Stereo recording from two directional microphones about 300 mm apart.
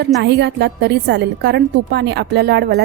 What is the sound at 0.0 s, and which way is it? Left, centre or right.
A woman's voice, right.